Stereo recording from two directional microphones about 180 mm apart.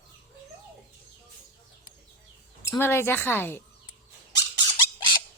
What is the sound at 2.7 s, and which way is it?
Speech, 15° left (ahead or behind).